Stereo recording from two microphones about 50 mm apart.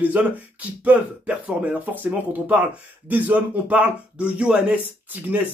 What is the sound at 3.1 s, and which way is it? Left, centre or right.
Speech, right.